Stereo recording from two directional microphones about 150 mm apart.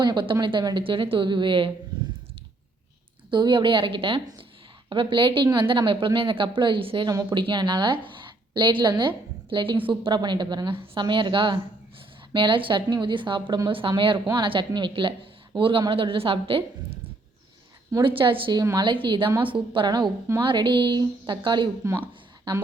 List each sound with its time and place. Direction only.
0.0 s a woman's voice: 30° right (ahead or behind)
3.2 s a woman's voice: 30° right (ahead or behind)
21.8 s a woman's voice: 20° right (ahead or behind)